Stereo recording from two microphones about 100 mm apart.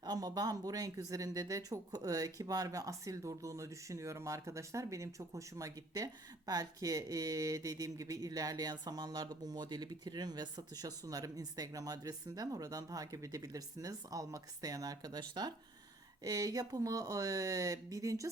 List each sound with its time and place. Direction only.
0.0 s speech: 40° right (ahead or behind)